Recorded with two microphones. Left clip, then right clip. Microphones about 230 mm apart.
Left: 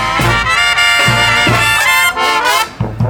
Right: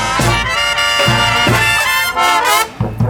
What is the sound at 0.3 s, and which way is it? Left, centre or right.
Music, centre.